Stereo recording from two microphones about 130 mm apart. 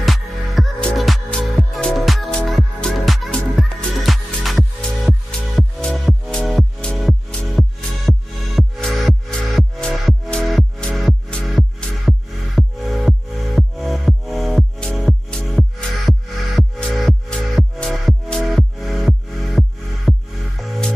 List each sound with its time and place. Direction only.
0.0 s music: centre (ahead or behind)